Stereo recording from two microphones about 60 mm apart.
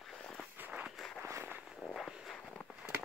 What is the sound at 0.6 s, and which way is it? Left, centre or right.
Walk, centre.